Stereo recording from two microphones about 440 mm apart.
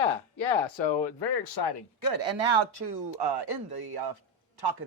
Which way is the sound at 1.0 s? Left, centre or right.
Left.